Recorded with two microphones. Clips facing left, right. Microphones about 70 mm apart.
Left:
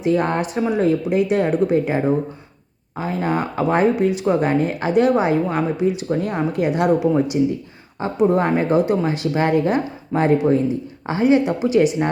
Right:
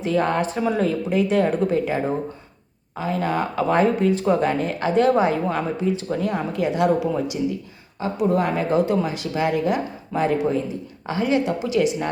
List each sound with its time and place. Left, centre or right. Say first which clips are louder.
0.0 s speech: left 2 dB; left
9.3 s speech: left 3 dB; left
9.6 s a woman's voice: left 3 dB; left